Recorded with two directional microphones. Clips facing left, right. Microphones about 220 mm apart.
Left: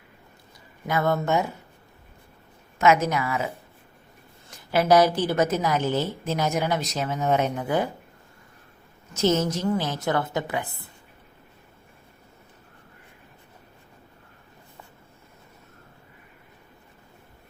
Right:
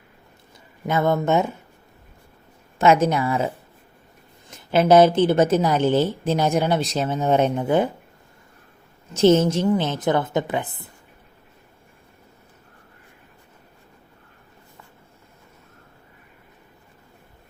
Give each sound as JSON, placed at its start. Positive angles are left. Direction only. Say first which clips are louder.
{"t": 0.9, "sound": "a woman's voice", "louder": "right 4 dB", "side_deg": -20}
{"t": 2.7, "sound": "a woman's voice", "louder": "right 3 dB", "side_deg": -30}
{"t": 9.1, "sound": "a woman's voice", "louder": "right 7 dB", "side_deg": -30}